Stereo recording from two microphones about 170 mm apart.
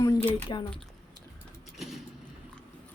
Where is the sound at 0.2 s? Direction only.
10° left (ahead or behind).